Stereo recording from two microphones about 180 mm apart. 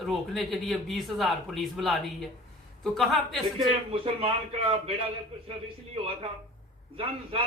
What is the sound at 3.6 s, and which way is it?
Speech, 30° right (ahead or behind).